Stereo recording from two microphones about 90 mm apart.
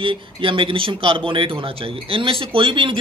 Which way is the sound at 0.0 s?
75° right (ahead or behind).